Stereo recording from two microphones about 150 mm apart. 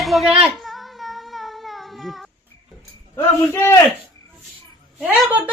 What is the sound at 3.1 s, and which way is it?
Speech, 15° left (ahead or behind).